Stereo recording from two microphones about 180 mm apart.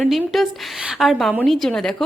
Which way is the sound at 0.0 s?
Centre (ahead or behind).